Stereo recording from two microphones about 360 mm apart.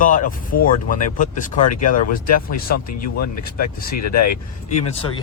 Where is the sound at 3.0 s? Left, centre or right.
Left.